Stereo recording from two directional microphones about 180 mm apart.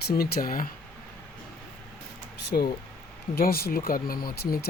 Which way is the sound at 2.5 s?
50° left (ahead or behind).